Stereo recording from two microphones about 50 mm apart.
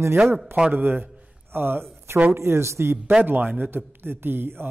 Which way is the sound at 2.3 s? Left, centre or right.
Right.